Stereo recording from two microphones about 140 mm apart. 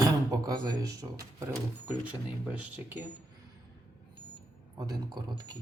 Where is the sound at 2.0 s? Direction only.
10° right (ahead or behind).